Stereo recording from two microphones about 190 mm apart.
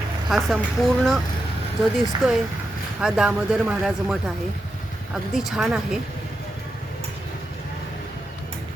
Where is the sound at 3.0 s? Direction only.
5° right (ahead or behind).